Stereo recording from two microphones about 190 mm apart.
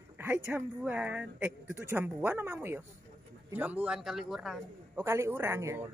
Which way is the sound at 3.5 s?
10° right (ahead or behind).